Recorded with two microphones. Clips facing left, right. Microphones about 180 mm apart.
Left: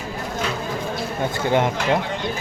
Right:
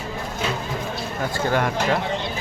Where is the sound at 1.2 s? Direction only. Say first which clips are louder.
Left 2 dB; 20° left (ahead or behind).